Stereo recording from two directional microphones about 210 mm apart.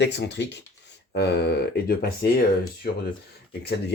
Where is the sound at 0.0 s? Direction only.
55° left (ahead or behind).